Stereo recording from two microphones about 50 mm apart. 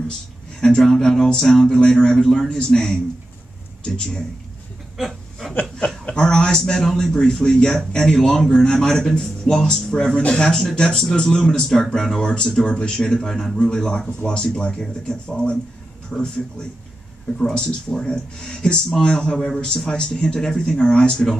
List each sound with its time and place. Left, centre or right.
0.6 s speech: centre
4.9 s a sound: centre
6.0 s speech: centre
19.3 s a man's voice: centre